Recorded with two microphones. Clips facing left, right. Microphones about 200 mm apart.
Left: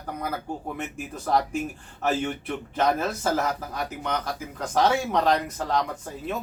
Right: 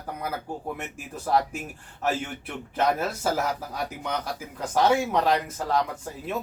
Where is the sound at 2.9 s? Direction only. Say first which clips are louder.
Left 1 dB; 10° right (ahead or behind).